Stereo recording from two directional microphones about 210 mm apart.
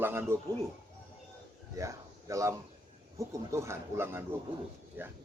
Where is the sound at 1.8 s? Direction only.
15° right (ahead or behind).